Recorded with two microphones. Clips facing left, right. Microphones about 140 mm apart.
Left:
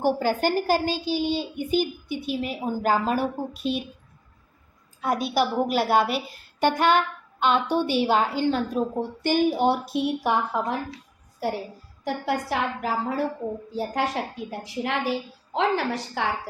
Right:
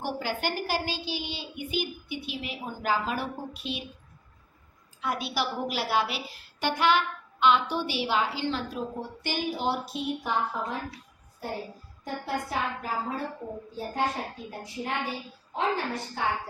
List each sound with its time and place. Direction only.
0.0 s a woman's voice: 45° left (ahead or behind)
4.9 s a woman's voice: 45° left (ahead or behind); by 10.8 s 70° left (ahead or behind)
11.4 s a woman's voice: 85° left